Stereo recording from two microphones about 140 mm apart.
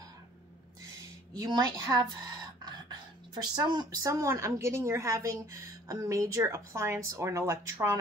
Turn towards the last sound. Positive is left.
turn(degrees=-20)  # may be behind; listen again after turning